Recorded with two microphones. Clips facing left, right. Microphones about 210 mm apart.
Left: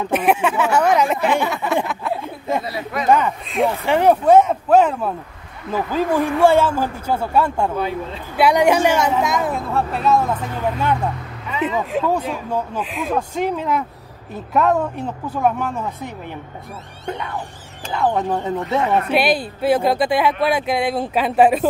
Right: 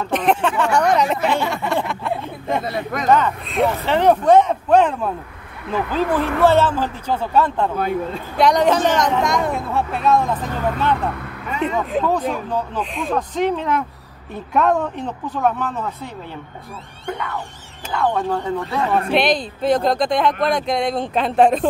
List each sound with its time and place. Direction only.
0.0 s speech: 10° left (ahead or behind)
1.9 s a sound: 5° left (ahead or behind)
2.6 s speech: 45° right (ahead or behind)
3.1 s speech: 10° left (ahead or behind)
3.4 s speech: centre (ahead or behind)
11.6 s speech: centre (ahead or behind)
17.9 s speech: 20° left (ahead or behind)
19.1 s speech: 5° left (ahead or behind)